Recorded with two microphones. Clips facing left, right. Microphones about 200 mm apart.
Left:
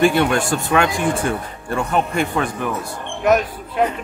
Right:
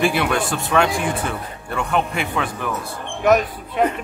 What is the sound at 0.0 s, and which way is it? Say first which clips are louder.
A woman's voice: left 4 dB; centre (ahead or behind).